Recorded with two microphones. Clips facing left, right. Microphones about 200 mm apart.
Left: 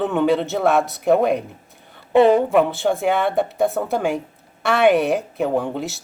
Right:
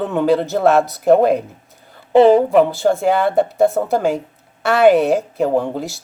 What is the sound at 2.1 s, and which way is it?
Speech, 30° right (ahead or behind).